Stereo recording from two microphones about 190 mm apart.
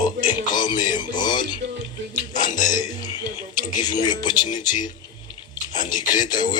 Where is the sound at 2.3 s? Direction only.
40° left (ahead or behind).